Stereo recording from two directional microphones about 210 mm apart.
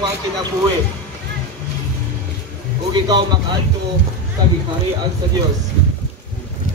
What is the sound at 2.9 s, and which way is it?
Speech, 20° right (ahead or behind).